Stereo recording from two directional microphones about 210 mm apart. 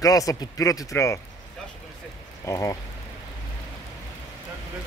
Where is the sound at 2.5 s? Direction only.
15° left (ahead or behind).